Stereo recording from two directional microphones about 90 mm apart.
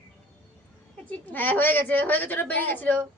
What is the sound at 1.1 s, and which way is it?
A woman's voice, 20° left (ahead or behind).